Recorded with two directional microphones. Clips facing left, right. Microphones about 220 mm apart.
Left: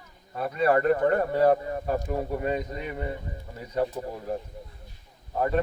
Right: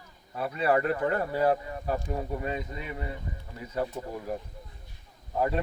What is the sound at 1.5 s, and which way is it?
Speech, 40° left (ahead or behind).